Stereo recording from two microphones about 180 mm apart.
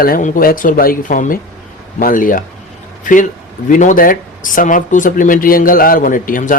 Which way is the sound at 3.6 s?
45° left (ahead or behind).